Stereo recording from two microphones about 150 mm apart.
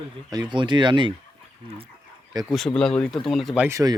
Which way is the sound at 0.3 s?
30° right (ahead or behind).